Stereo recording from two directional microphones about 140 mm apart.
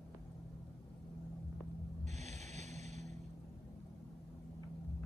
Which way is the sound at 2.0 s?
55° right (ahead or behind).